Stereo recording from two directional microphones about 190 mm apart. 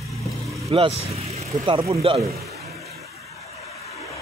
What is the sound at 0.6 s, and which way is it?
Speech, 30° right (ahead or behind).